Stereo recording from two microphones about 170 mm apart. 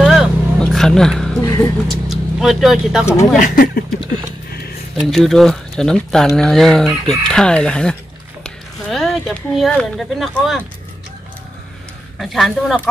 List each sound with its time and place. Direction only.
0.0 s vehicle: centre (ahead or behind)
1.9 s speech: centre (ahead or behind)
3.3 s speech: 50° left (ahead or behind)
4.9 s speech: centre (ahead or behind)
12.2 s speech: centre (ahead or behind)